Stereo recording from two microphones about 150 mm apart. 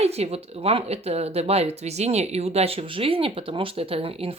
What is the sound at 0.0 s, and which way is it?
A woman's voice, 45° right (ahead or behind).